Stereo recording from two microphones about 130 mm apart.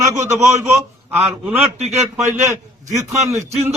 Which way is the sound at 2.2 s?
25° right (ahead or behind).